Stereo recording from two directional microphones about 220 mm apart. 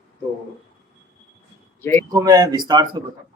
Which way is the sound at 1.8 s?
10° left (ahead or behind).